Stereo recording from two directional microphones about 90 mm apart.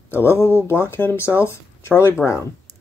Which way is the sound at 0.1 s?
25° left (ahead or behind).